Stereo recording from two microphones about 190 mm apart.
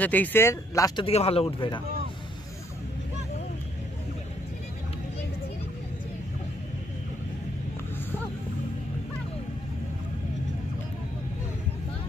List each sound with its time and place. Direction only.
0.0 s speech: 10° left (ahead or behind); by 1.8 s 30° left (ahead or behind)